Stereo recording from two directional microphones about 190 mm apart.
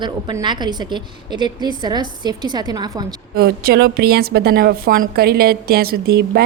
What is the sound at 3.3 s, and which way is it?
A woman's voice, 55° right (ahead or behind).